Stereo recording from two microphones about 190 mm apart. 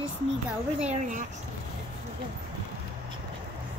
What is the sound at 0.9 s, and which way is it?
Speech, 40° right (ahead or behind).